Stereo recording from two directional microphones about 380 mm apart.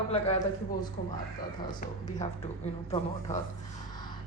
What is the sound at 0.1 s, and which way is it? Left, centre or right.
Speech, centre.